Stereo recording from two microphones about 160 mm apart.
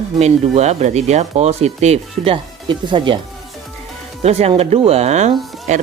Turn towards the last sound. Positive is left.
turn(degrees=-45)  # may be behind; listen again after turning